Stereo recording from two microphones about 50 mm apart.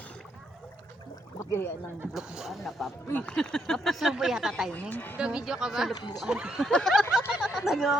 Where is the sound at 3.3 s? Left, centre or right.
Centre.